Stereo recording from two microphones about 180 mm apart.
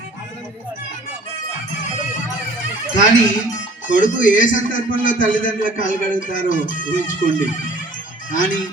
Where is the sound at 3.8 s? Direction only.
45° left (ahead or behind).